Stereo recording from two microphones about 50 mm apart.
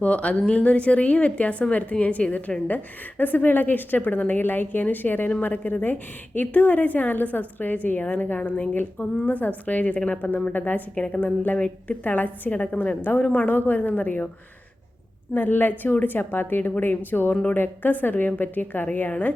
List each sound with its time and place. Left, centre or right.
0.0 s a woman's voice: left
15.4 s a woman's voice: left